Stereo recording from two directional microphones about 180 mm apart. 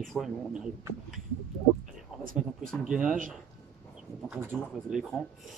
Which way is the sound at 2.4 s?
Centre (ahead or behind).